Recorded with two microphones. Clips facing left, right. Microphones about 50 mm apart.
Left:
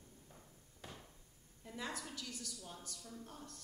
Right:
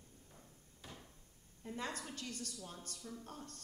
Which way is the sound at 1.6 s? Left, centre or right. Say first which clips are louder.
Right 4 dB; right.